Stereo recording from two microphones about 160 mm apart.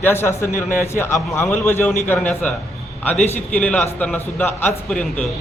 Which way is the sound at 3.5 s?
10° left (ahead or behind).